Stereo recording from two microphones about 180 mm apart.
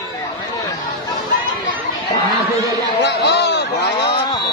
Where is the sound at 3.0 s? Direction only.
70° left (ahead or behind).